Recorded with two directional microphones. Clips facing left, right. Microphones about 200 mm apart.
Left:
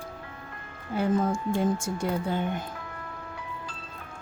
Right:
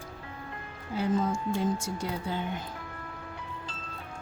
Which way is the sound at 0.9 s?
55° left (ahead or behind).